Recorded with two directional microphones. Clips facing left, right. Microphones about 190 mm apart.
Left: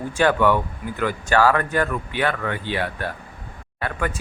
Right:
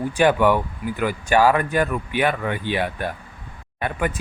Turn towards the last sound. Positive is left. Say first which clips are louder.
# right 2 dB
turn(degrees=-20)  # may be behind; listen again after turning